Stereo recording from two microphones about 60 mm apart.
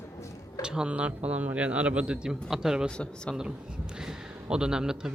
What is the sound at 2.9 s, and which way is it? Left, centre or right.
Speech, centre.